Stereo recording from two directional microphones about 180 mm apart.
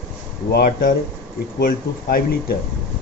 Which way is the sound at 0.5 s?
55° left (ahead or behind).